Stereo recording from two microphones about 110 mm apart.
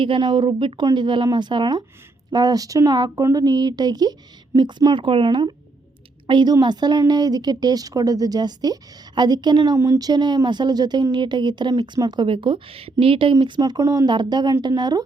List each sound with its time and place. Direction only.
0.0 s a woman's voice: 50° right (ahead or behind)
4.9 s a woman's voice: 50° right (ahead or behind)
9.7 s a woman's voice: 30° right (ahead or behind); by 13.3 s 55° right (ahead or behind)
13.6 s speech: 35° right (ahead or behind)